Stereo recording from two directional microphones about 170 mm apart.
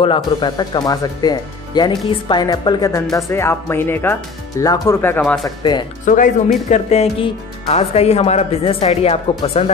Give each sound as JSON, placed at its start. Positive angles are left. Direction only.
{"t": 0.0, "sound": "speech", "side_deg": 30}
{"t": 5.2, "sound": "speech", "side_deg": 0}
{"t": 5.6, "sound": "speech", "side_deg": 25}
{"t": 6.0, "sound": "speech", "side_deg": 50}